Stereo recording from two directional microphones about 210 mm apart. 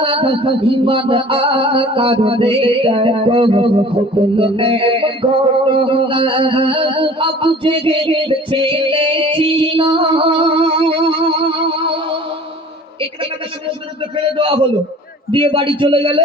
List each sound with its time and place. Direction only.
0.0 s music: 25° right (ahead or behind)
5.8 s a sound: 25° right (ahead or behind)
14.3 s music: 25° right (ahead or behind)